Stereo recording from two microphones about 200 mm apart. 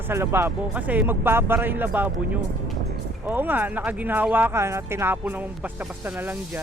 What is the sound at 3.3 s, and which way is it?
Speech, 10° right (ahead or behind).